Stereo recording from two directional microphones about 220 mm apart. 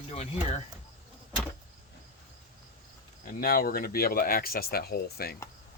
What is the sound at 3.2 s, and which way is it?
Speech, 40° left (ahead or behind).